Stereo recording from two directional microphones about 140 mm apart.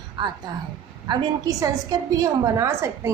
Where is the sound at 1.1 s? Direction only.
25° right (ahead or behind).